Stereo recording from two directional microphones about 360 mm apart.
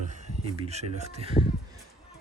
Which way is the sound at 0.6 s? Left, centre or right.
Centre.